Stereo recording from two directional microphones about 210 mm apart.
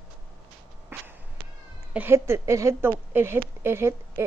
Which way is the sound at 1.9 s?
10° right (ahead or behind).